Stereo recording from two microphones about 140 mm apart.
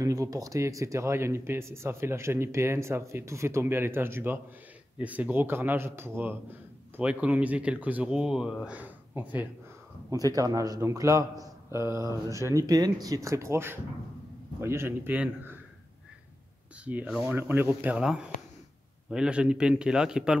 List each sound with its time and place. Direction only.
0.0 s speech: 25° right (ahead or behind)
10.1 s speech: 25° right (ahead or behind)
16.8 s a man's voice: 10° right (ahead or behind)